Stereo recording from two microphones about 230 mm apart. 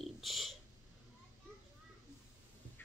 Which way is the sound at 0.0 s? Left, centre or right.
Centre.